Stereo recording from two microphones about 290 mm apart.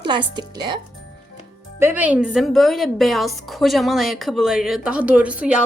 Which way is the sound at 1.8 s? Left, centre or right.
Centre.